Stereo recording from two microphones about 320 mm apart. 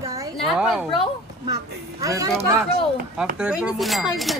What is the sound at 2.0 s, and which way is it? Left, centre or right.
Speech, centre.